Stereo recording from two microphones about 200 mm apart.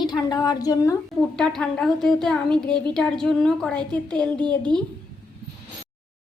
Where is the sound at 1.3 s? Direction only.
5° left (ahead or behind).